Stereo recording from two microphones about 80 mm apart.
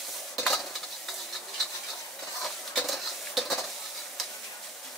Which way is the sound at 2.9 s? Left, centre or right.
Centre.